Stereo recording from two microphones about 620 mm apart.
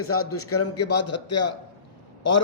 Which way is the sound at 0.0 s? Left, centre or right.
Left.